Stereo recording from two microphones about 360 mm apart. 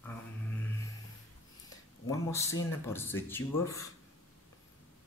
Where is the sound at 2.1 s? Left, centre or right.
Centre.